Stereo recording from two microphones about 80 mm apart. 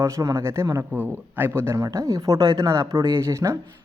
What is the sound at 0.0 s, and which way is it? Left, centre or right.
Speech, right.